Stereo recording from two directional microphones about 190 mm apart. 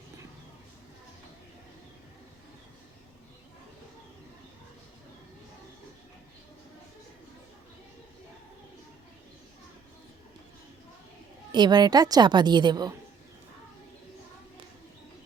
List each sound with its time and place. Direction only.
11.5 s a woman's voice: 25° right (ahead or behind)